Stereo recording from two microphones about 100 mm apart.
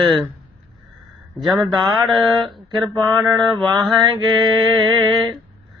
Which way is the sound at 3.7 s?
45° right (ahead or behind).